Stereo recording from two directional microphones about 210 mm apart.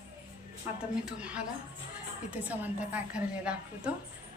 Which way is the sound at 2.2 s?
5° right (ahead or behind).